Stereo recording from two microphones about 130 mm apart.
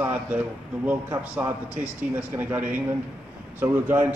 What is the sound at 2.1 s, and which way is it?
A man's voice, 15° right (ahead or behind).